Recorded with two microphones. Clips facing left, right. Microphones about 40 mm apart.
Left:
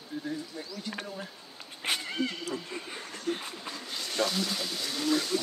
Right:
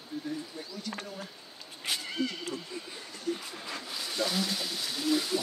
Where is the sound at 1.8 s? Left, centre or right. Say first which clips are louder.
Left 3 dB; left.